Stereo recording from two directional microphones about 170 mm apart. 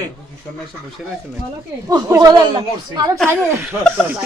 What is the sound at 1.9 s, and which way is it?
Speech, 25° right (ahead or behind).